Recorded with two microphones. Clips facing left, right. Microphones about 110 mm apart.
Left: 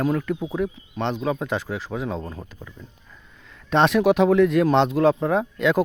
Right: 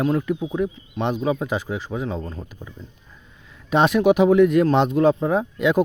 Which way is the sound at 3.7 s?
5° right (ahead or behind).